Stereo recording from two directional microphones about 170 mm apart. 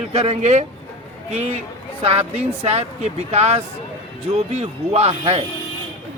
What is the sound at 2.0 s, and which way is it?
Speech, 40° right (ahead or behind).